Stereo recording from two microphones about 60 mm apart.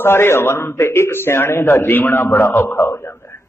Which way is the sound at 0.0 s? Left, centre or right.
Left.